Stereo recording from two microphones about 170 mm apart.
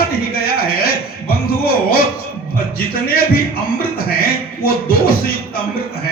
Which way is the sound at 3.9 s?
60° left (ahead or behind).